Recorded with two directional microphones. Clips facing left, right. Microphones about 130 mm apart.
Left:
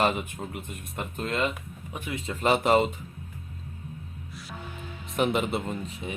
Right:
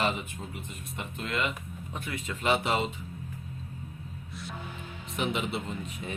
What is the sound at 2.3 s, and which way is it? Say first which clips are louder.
Speech: left 5 dB; 40° left (ahead or behind).